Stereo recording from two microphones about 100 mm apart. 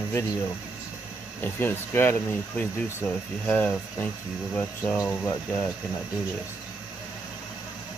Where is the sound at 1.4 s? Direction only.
20° left (ahead or behind).